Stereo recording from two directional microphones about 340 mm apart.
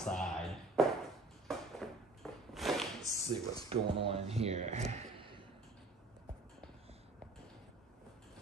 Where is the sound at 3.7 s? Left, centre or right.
Centre.